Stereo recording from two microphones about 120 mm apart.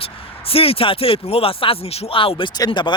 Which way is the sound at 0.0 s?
50° left (ahead or behind).